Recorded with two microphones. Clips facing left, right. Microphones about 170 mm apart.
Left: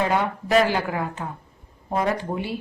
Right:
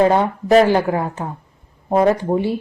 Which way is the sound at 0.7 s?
25° right (ahead or behind).